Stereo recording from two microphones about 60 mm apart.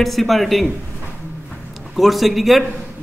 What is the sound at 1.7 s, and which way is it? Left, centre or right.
Speech, centre.